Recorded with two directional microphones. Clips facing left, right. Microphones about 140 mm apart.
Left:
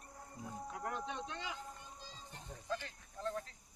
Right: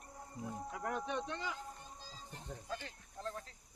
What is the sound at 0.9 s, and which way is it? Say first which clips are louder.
Speech: right 5 dB; 55° right (ahead or behind).